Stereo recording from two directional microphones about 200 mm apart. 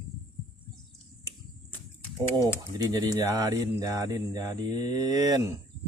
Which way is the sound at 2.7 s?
20° right (ahead or behind).